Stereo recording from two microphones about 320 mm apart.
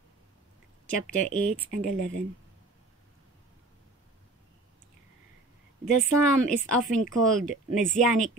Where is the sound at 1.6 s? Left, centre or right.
Left.